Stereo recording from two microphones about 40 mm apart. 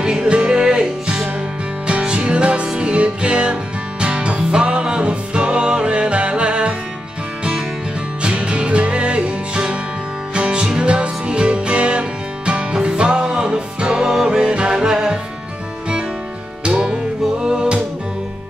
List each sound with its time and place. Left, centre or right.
0.0 s music: centre
8.2 s music: right
16.6 s music: right